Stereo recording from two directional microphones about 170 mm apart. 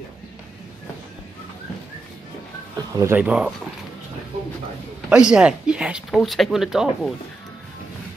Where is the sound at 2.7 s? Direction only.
20° right (ahead or behind).